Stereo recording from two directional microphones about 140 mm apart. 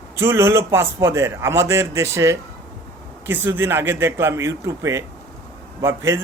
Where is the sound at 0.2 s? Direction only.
20° right (ahead or behind).